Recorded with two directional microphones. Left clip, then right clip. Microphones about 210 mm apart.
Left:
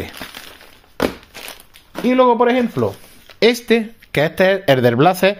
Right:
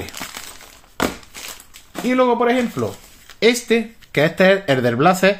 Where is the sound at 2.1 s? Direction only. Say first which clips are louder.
Left 3 dB; 45° left (ahead or behind).